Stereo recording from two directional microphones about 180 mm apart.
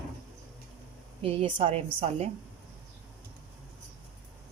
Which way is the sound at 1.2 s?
30° right (ahead or behind).